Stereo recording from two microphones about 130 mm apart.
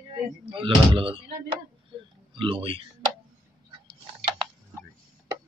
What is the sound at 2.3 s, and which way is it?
Speech, 40° right (ahead or behind).